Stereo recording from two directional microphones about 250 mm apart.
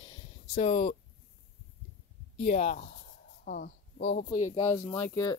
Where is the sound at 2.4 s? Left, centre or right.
Left.